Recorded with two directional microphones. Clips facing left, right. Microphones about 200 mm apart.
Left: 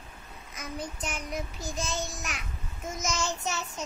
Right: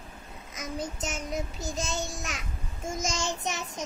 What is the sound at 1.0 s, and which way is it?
Child singing, 25° right (ahead or behind).